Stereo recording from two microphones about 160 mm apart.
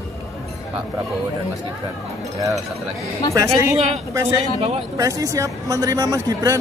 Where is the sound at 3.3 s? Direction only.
20° right (ahead or behind).